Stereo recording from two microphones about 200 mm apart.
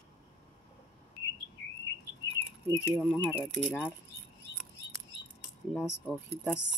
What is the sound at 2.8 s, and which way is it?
Speech, 5° right (ahead or behind).